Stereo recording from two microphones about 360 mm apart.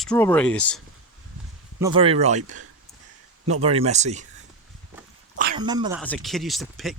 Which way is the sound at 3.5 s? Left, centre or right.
Centre.